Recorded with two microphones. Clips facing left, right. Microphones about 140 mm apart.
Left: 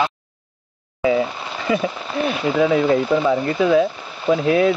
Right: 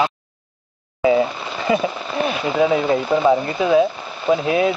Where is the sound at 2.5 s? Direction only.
15° right (ahead or behind).